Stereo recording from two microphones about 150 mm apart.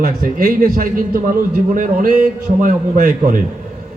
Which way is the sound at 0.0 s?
70° right (ahead or behind).